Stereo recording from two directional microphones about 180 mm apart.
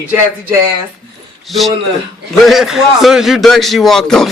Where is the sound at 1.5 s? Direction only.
Centre (ahead or behind).